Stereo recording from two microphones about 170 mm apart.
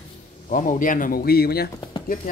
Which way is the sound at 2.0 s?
50° left (ahead or behind).